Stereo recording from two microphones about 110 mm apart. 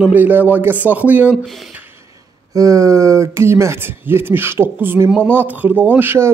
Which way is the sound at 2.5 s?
30° right (ahead or behind).